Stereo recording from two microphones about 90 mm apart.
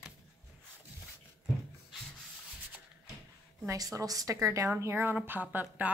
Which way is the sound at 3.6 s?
40° right (ahead or behind).